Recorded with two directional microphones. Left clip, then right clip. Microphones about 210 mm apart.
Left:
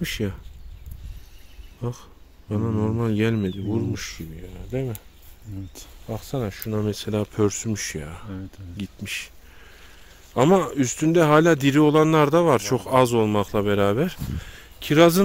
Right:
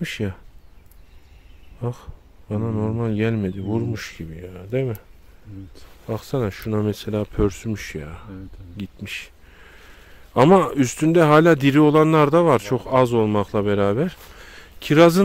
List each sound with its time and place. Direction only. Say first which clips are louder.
0.0 s speech: even; 15° right (ahead or behind)
1.8 s speech: right 3 dB; 20° right (ahead or behind)
3.5 s speech: right 1 dB; 25° right (ahead or behind)
6.0 s speech: right 5 dB; 30° right (ahead or behind)
6.8 s speech: right 1 dB; 15° right (ahead or behind)
7.1 s speech: left 2 dB; 5° right (ahead or behind)
10.3 s speech: right 4 dB; 25° right (ahead or behind)